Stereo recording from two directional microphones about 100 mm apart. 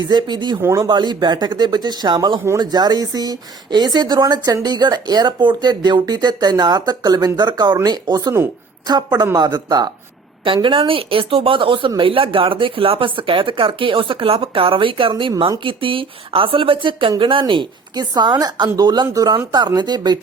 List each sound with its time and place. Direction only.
0.0 s speech: 45° right (ahead or behind)
0.6 s speech: 30° right (ahead or behind)
0.9 s speech: 45° right (ahead or behind)
10.4 s speech: 60° right (ahead or behind)